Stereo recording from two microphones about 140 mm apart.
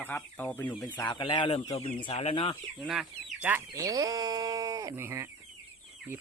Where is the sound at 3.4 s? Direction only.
20° right (ahead or behind).